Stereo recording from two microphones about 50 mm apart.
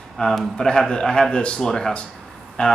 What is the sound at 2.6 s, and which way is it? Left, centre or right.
Speech, left.